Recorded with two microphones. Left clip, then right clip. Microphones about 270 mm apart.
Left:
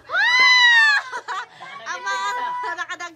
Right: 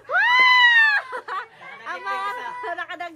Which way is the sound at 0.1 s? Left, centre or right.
Centre.